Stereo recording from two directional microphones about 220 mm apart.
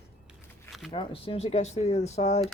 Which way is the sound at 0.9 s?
25° left (ahead or behind).